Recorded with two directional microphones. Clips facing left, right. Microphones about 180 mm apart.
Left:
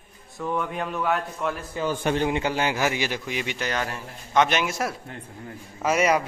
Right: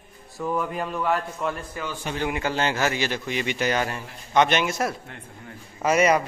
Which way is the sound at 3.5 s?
5° right (ahead or behind).